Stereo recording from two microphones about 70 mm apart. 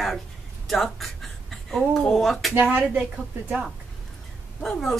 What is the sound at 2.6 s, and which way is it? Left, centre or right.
Speech, right.